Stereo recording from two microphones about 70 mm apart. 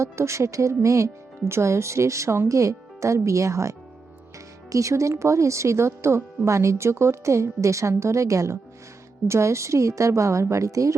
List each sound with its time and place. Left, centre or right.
0.0 s speech: right